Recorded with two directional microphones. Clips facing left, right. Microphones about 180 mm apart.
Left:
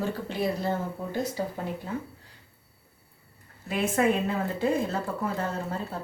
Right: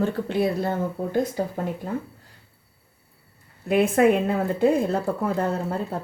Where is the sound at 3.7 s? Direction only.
60° right (ahead or behind).